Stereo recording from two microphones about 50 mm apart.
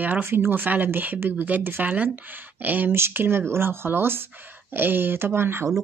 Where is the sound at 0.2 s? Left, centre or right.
Right.